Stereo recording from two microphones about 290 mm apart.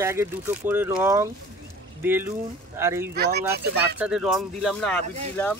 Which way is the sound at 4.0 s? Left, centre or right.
Centre.